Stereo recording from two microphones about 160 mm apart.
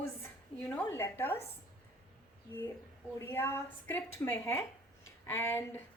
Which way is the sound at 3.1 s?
15° left (ahead or behind).